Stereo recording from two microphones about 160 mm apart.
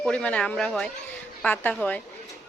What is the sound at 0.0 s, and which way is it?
A woman's voice, 5° left (ahead or behind).